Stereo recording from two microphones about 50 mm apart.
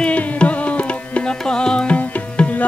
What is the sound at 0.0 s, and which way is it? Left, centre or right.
Music, left.